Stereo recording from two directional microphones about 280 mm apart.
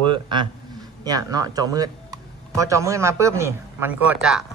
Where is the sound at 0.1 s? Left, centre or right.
Centre.